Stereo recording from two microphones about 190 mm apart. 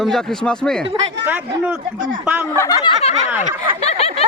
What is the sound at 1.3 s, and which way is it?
Speech, 5° right (ahead or behind).